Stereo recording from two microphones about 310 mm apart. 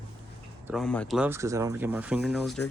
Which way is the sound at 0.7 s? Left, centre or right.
Centre.